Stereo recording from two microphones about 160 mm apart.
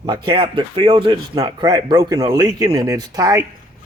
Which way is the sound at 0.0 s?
30° right (ahead or behind).